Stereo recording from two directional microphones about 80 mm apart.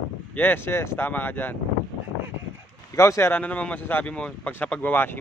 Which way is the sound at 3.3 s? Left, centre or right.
Centre.